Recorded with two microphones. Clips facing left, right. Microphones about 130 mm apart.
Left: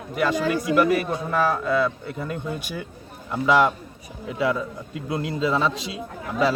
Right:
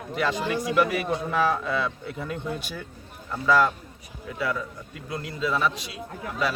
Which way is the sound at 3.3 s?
20° left (ahead or behind).